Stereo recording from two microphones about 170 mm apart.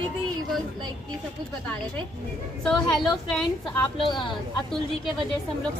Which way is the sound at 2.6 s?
5° left (ahead or behind).